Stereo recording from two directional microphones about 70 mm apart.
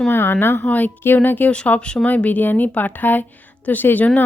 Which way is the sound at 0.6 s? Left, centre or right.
Left.